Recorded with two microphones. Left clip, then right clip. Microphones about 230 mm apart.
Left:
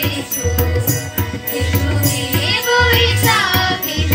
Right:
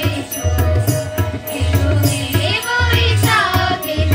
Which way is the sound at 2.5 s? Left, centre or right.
Right.